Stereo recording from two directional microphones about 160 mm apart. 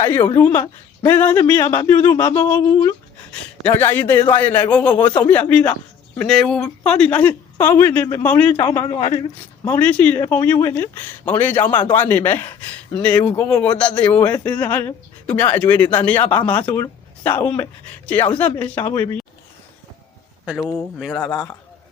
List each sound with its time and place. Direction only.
0.3 s speech: 15° left (ahead or behind)
8.9 s a woman's voice: 30° left (ahead or behind)
9.6 s speech: 10° left (ahead or behind)
20.6 s speech: 15° left (ahead or behind)
21.0 s speech: 5° left (ahead or behind)